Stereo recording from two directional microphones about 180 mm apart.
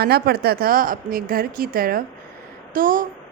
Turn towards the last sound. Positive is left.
turn(degrees=-50)  # may be behind; listen again after turning